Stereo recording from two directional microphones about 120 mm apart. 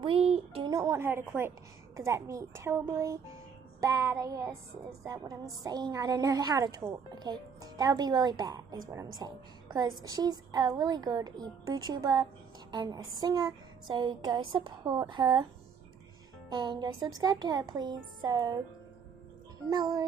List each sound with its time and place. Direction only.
0.0 s a sound: 55° right (ahead or behind)
0.7 s a woman's voice: 30° right (ahead or behind)
1.0 s a woman's voice: 20° right (ahead or behind); by 15.4 s 40° right (ahead or behind)
16.4 s a woman's voice: 40° right (ahead or behind)
19.7 s a woman's voice: 35° right (ahead or behind)